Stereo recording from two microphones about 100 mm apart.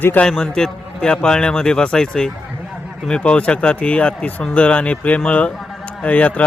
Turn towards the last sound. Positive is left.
turn(degrees=15)  # may be behind; listen again after turning